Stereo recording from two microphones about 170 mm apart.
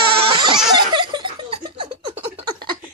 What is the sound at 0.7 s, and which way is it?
Laughter, 25° right (ahead or behind).